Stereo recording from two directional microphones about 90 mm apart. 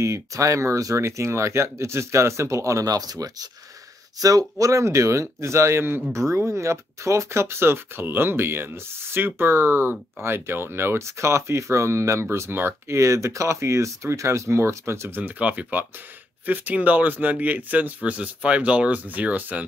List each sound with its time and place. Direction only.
0.0 s speech: 35° right (ahead or behind); by 19.6 s 15° right (ahead or behind)